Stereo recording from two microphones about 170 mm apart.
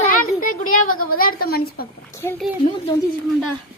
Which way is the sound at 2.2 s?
15° left (ahead or behind).